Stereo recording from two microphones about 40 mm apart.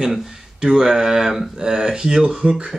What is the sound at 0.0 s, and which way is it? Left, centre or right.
Speech, centre.